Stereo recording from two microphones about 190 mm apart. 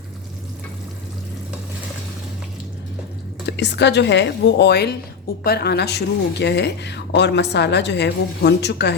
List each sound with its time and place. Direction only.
3.4 s a woman's voice: 65° left (ahead or behind)